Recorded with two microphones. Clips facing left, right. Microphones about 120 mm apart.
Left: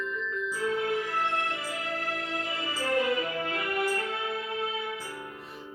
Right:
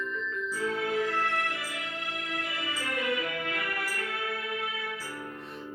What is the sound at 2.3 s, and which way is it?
Music, 30° left (ahead or behind).